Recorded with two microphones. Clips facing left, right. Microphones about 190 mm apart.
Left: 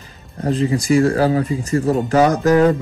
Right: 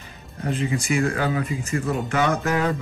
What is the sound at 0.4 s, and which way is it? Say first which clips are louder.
Speech: left 7 dB; 35° left (ahead or behind).